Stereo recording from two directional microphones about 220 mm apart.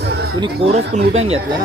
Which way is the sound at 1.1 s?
25° right (ahead or behind).